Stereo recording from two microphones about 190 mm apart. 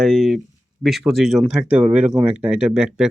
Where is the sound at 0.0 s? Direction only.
Centre (ahead or behind).